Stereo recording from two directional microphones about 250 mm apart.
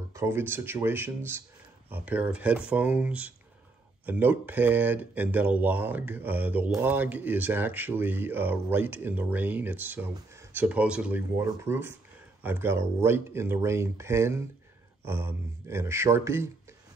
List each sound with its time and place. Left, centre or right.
0.1 s speech: centre